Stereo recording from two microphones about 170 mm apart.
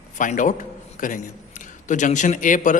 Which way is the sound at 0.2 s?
50° left (ahead or behind).